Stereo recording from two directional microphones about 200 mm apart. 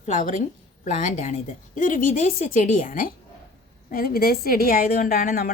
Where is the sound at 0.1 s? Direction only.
40° left (ahead or behind).